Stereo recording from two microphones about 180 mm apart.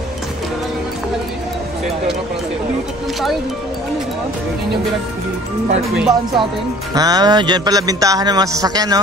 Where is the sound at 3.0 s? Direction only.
Centre (ahead or behind).